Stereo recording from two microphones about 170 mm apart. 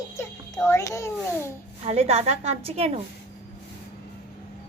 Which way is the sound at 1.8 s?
40° right (ahead or behind).